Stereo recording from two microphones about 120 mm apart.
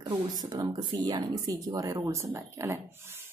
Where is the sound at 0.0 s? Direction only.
35° right (ahead or behind).